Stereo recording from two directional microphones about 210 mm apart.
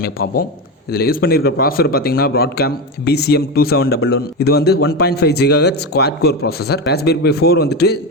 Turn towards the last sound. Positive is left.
turn(degrees=50)  # may be behind; listen again after turning